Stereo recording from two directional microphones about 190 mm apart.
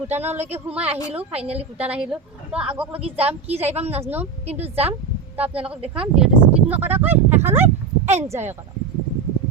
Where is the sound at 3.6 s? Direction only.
35° right (ahead or behind).